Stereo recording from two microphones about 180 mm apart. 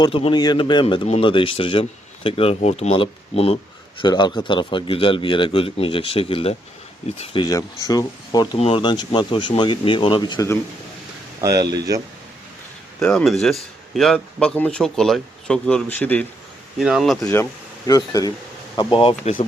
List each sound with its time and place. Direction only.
0.0 s a man's voice: 30° left (ahead or behind)
4.0 s a man's voice: 25° left (ahead or behind)
8.5 s a man's voice: 30° left (ahead or behind)
11.3 s speech: 20° right (ahead or behind)
13.0 s a man's voice: 5° left (ahead or behind)
16.7 s a man's voice: centre (ahead or behind)
17.8 s a man's voice: 20° left (ahead or behind)